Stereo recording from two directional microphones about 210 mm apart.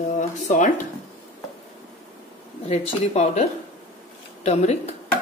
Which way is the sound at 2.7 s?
30° left (ahead or behind).